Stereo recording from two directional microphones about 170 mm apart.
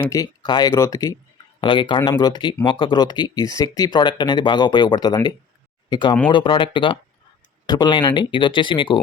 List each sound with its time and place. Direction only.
0.1 s speech: 20° left (ahead or behind)